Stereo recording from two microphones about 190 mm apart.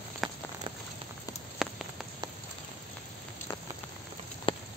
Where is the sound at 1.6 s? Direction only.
Centre (ahead or behind).